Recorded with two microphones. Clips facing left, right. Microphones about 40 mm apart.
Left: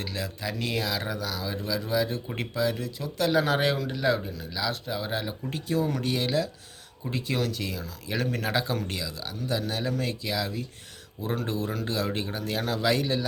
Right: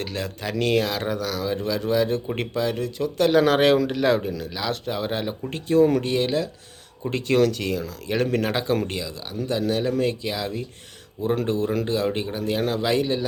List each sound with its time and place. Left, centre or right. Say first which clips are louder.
0.0 s speech: right 4 dB; right
3.4 s speech: right 8 dB; right
4.4 s speech: right 3 dB; right
5.0 s speech: right 4 dB; right
7.1 s a man's voice: right 9 dB; right